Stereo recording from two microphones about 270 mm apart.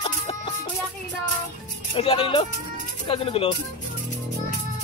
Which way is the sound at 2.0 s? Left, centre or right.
Centre.